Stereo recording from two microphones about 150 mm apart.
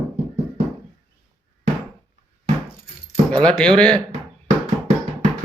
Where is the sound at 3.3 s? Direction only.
5° left (ahead or behind).